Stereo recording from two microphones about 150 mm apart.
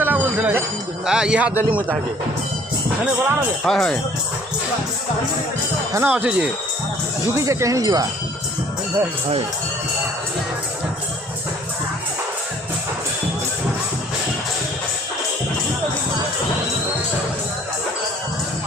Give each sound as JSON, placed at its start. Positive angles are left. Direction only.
{"t": 0.0, "sound": "a sound", "side_deg": -15}
{"t": 1.0, "sound": "speech", "side_deg": -5}
{"t": 3.6, "sound": "speech", "side_deg": 5}
{"t": 5.9, "sound": "speech", "side_deg": -10}